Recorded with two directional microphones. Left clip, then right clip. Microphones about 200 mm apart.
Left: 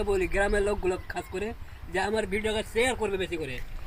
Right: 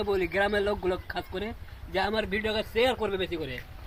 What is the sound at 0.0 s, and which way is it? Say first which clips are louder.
Speech: even; 10° left (ahead or behind).